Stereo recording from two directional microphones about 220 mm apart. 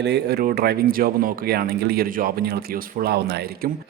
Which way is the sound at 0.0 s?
50° right (ahead or behind).